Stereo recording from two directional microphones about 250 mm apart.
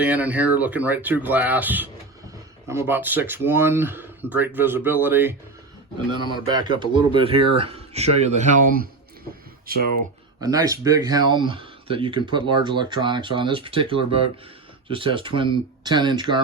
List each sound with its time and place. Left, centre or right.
0.0 s speech: centre; by 8.9 s right
10.4 s speech: centre